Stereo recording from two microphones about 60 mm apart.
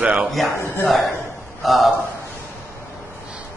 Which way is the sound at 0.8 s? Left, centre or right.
Centre.